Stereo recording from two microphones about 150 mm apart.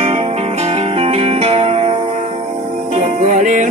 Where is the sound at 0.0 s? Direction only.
45° right (ahead or behind).